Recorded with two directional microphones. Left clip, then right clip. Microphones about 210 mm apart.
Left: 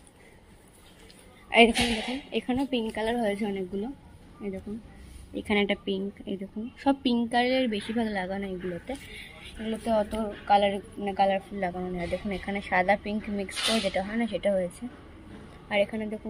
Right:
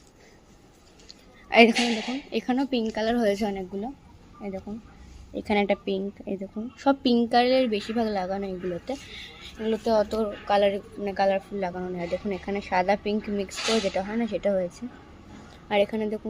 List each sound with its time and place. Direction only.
1.5 s a woman's voice: 20° right (ahead or behind)
1.8 s a woman's voice: centre (ahead or behind)
2.3 s a woman's voice: 20° right (ahead or behind)
5.3 s a woman's voice: 15° right (ahead or behind)
13.6 s a woman's voice: centre (ahead or behind)
14.1 s a woman's voice: 15° right (ahead or behind)
15.7 s a woman's voice: 20° right (ahead or behind)